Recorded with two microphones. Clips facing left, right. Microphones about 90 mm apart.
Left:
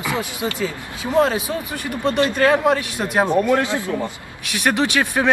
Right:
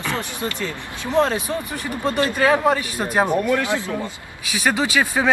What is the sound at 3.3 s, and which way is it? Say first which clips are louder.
Speech: left 3 dB; 20° left (ahead or behind).